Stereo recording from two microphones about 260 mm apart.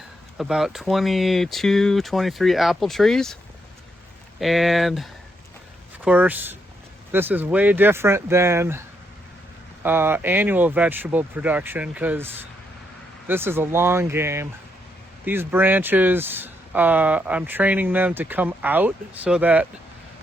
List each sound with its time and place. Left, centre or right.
0.3 s speech: centre
4.4 s speech: centre
6.1 s speech: centre
9.8 s speech: centre